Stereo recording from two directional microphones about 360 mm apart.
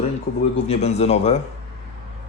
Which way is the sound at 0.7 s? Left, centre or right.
Centre.